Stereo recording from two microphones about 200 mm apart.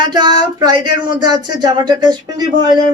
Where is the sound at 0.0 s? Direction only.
20° right (ahead or behind).